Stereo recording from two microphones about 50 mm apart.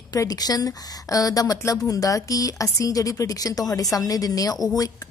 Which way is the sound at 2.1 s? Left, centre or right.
Left.